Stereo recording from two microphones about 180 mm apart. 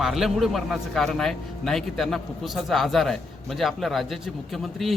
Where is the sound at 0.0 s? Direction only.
Centre (ahead or behind).